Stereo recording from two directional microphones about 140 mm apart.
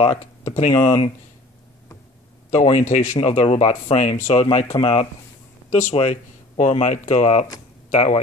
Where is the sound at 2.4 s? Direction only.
55° left (ahead or behind).